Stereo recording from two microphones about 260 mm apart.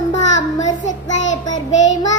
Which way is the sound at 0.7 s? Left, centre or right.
Left.